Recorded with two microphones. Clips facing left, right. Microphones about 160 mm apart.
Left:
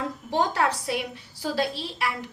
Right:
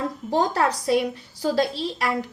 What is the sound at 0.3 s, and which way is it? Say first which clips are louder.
A woman's voice: right 3 dB; 40° right (ahead or behind).